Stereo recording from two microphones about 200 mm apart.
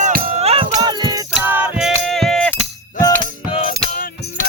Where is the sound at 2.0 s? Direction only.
Centre (ahead or behind).